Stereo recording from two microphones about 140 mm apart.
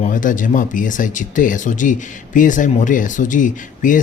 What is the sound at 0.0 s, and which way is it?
Speech, 70° left (ahead or behind).